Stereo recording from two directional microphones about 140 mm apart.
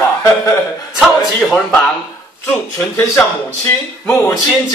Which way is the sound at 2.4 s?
15° left (ahead or behind).